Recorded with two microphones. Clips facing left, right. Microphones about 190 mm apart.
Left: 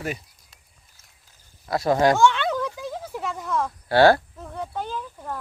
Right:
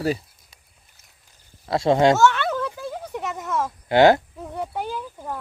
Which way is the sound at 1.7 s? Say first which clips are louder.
Right 2 dB; 25° right (ahead or behind).